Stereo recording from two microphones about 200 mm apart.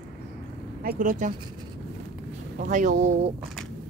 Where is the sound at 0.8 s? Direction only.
40° right (ahead or behind).